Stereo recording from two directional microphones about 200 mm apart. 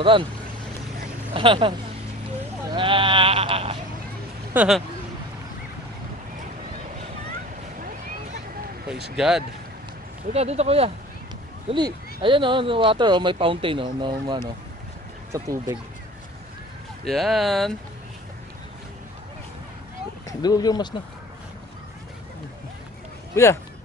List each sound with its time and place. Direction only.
0.0 s speech: 25° right (ahead or behind)
1.3 s speech: 25° right (ahead or behind)
2.7 s sheep: 25° right (ahead or behind)
4.6 s speech: centre (ahead or behind)
9.1 s speech: 5° right (ahead or behind)
10.3 s speech: 30° right (ahead or behind); by 15.8 s 15° right (ahead or behind)
17.0 s speech: centre (ahead or behind)
20.2 s speech: 20° left (ahead or behind)
23.3 s speech: 15° left (ahead or behind)